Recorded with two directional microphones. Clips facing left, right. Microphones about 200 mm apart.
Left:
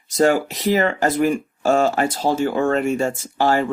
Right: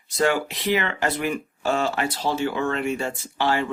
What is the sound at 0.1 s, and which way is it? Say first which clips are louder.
Speech: left 5 dB; 45° left (ahead or behind).